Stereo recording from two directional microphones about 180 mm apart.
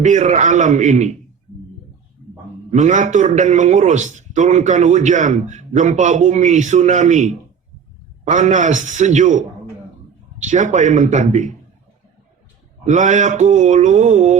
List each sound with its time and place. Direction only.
0.0 s a man's voice: 40° right (ahead or behind)
2.6 s a man's voice: 40° right (ahead or behind)
12.8 s a man's voice: 40° right (ahead or behind)